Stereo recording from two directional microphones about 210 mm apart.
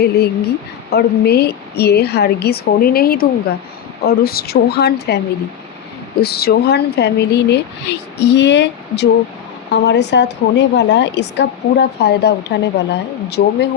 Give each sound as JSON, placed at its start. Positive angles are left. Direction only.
{"t": 0.0, "sound": "a woman's voice", "side_deg": 50}